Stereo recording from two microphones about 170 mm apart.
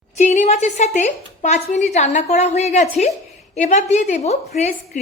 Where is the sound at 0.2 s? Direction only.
45° left (ahead or behind).